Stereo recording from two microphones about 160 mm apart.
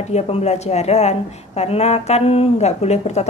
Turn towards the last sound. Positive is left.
turn(degrees=45)  # may be behind; listen again after turning